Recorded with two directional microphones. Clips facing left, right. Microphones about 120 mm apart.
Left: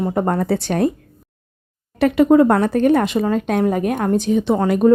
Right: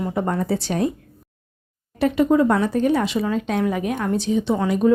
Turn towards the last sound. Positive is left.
turn(degrees=50)  # may be behind; listen again after turning